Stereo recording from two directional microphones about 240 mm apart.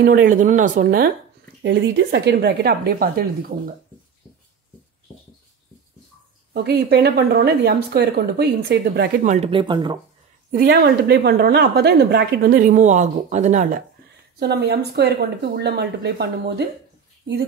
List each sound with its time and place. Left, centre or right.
0.0 s a woman's voice: right
1.6 s speech: right
6.5 s speech: right
9.3 s speech: right
10.5 s a woman's voice: right
14.4 s speech: right